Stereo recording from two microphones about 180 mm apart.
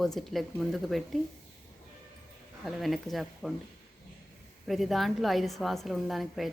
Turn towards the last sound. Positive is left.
turn(degrees=0)  # may be behind; listen again after turning